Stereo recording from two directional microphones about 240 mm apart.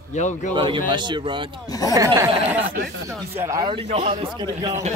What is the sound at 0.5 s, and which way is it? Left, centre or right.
Speech, right.